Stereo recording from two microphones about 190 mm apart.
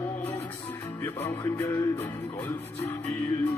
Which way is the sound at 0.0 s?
15° left (ahead or behind).